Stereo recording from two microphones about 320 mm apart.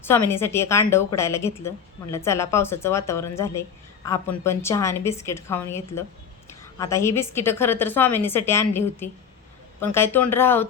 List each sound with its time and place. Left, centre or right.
0.0 s a woman's voice: centre